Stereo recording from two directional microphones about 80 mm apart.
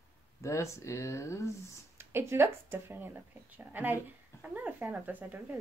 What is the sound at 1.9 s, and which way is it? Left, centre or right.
A woman's voice, right.